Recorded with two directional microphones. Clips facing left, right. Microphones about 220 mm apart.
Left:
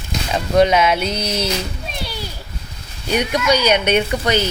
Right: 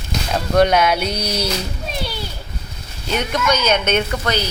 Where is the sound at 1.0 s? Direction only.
25° left (ahead or behind).